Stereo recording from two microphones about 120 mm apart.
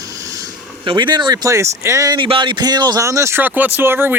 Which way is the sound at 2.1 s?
45° right (ahead or behind).